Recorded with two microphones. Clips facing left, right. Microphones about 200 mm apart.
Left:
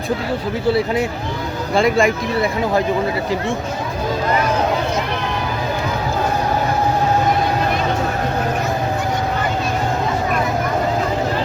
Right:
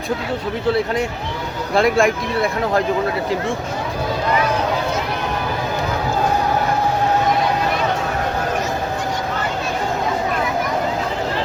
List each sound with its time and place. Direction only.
1.7 s speech: centre (ahead or behind)